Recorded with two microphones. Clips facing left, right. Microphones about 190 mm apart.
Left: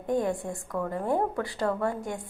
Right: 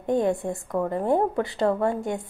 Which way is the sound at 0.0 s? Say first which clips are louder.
Right 4 dB; 25° right (ahead or behind).